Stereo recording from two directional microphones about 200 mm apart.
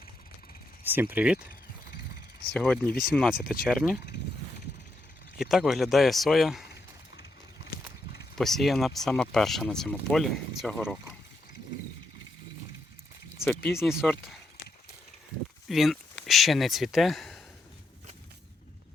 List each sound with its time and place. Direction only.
0.9 s speech: 10° right (ahead or behind)
2.8 s speech: 50° left (ahead or behind)
3.1 s speech: 5° right (ahead or behind)
5.4 s speech: centre (ahead or behind)
8.4 s speech: centre (ahead or behind)
13.4 s speech: 10° left (ahead or behind)
13.8 s speech: 5° right (ahead or behind)
15.7 s speech: centre (ahead or behind)